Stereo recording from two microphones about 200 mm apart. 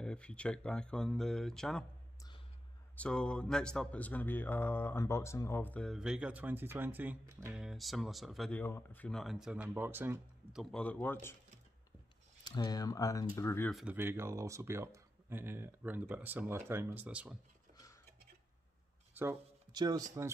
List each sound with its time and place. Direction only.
0.0 s speech: 5° left (ahead or behind)
3.0 s speech: 5° left (ahead or behind); by 7.6 s 15° right (ahead or behind)
7.6 s speech: centre (ahead or behind)
10.6 s speech: 5° left (ahead or behind)
12.4 s speech: 20° left (ahead or behind)
13.7 s speech: centre (ahead or behind)
13.9 s speech: 10° right (ahead or behind)
19.1 s speech: 15° right (ahead or behind)